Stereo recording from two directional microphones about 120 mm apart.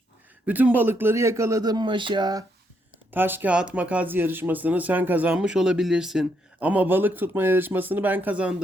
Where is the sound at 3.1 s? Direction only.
15° right (ahead or behind).